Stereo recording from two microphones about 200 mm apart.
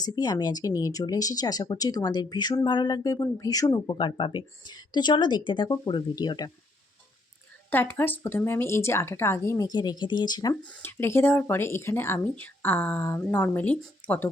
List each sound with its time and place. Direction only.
0.0 s speech: 20° left (ahead or behind)
7.7 s speech: 10° left (ahead or behind)